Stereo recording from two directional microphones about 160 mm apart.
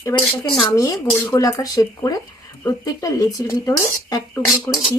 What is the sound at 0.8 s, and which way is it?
Speech, 20° left (ahead or behind).